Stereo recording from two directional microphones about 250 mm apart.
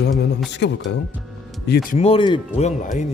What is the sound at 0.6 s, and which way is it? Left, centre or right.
Speech, left.